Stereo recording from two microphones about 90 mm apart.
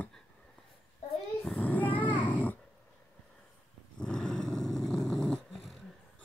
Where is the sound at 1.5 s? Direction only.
15° left (ahead or behind).